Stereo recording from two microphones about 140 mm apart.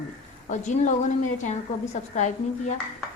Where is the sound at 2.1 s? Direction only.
55° left (ahead or behind).